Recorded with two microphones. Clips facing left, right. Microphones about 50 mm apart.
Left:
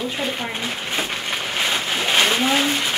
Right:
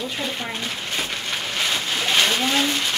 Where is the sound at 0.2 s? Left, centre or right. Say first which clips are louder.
Left 2 dB; left.